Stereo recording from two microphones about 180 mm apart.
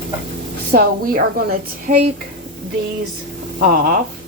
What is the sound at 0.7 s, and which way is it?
A woman's voice, 55° right (ahead or behind).